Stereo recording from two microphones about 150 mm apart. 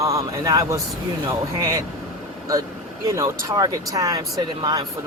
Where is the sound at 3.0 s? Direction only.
20° right (ahead or behind).